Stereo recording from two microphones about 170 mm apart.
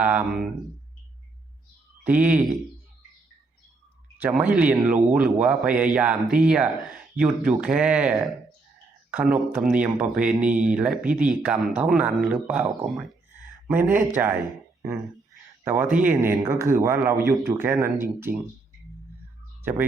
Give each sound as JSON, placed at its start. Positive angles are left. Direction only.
{"t": 0.0, "sound": "speech", "side_deg": -10}
{"t": 2.0, "sound": "speech", "side_deg": -10}
{"t": 4.2, "sound": "speech", "side_deg": -10}
{"t": 14.4, "sound": "a sound", "side_deg": -15}
{"t": 15.6, "sound": "speech", "side_deg": -15}